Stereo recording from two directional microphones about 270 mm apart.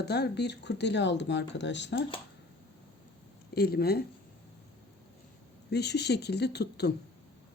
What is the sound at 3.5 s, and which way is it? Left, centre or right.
Speech, left.